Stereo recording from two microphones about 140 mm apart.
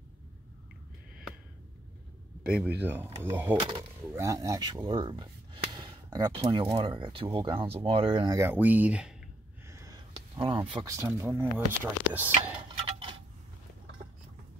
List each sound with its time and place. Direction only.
2.4 s speech: 5° right (ahead or behind); by 8.3 s 45° right (ahead or behind)
8.3 s speech: 20° right (ahead or behind)
9.7 s gasp: 20° right (ahead or behind)
9.9 s a sound: 35° right (ahead or behind)
11.1 s speech: 15° right (ahead or behind)